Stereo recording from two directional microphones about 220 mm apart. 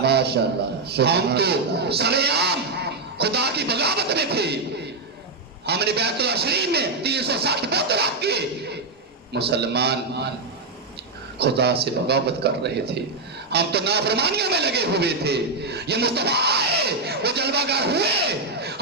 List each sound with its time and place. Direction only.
0.0 s a sound: 50° right (ahead or behind)
0.9 s a man's voice: 50° right (ahead or behind)
5.6 s a man's voice: 50° right (ahead or behind)
11.3 s a man's voice: 50° right (ahead or behind)